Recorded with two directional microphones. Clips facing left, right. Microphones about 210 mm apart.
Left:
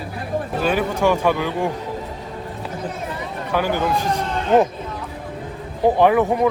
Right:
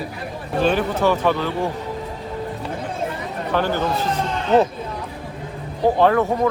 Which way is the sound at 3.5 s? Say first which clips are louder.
Left 1 dB; 10° left (ahead or behind).